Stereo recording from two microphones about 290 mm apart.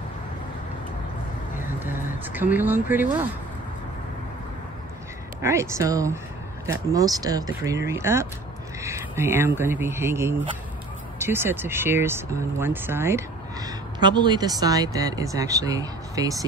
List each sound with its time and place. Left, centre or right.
1.8 s speech: centre
5.4 s speech: centre